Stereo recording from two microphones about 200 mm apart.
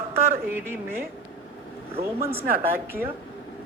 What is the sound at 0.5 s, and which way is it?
Speech, 10° right (ahead or behind).